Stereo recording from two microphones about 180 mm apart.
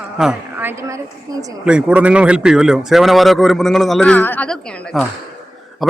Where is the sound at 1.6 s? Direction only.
5° right (ahead or behind).